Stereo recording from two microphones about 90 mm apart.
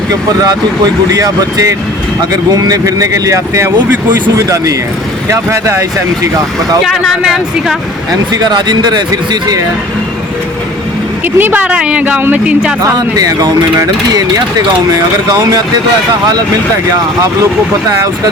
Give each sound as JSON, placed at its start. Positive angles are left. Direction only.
{"t": 1.1, "sound": "speech", "side_deg": -40}
{"t": 6.8, "sound": "speech", "side_deg": 0}
{"t": 8.3, "sound": "speech", "side_deg": -50}
{"t": 11.3, "sound": "speech", "side_deg": -20}
{"t": 13.0, "sound": "speech", "side_deg": -45}